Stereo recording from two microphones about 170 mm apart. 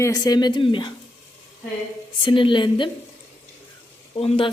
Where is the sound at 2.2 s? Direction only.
30° left (ahead or behind).